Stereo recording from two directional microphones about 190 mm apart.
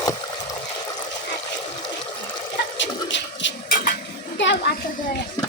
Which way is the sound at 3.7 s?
50° left (ahead or behind).